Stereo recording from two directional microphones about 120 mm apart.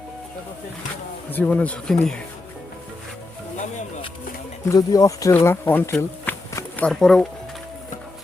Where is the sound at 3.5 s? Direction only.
90° left.